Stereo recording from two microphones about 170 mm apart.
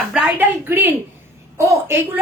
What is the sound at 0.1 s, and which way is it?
A woman's voice, 10° right (ahead or behind).